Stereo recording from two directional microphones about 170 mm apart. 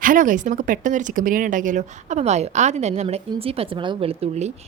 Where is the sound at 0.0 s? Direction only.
50° right (ahead or behind).